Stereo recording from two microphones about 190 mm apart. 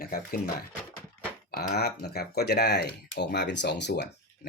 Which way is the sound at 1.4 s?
55° left (ahead or behind).